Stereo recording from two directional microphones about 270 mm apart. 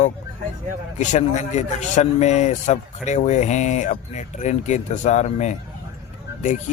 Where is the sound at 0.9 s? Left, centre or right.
Left.